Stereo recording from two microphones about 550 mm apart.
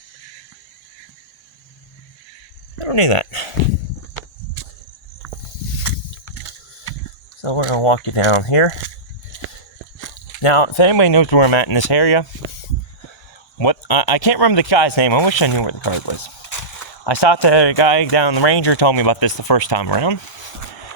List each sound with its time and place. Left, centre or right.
2.7 s speech: left
4.6 s cricket: left
7.4 s speech: left
10.4 s speech: left
11.0 s speech: left
11.3 s speech: left
13.6 s speech: left
18.2 s speech: left